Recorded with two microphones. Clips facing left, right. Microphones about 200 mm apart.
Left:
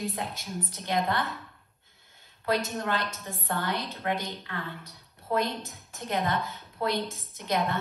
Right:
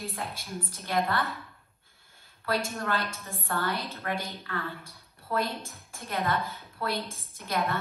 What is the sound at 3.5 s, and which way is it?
Speech, 15° left (ahead or behind).